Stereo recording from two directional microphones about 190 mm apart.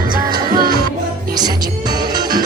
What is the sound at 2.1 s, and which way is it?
Music, 20° right (ahead or behind).